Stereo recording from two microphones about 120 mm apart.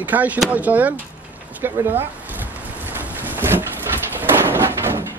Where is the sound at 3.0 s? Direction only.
15° right (ahead or behind).